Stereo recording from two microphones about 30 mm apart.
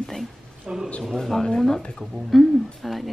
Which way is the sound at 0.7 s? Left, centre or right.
Right.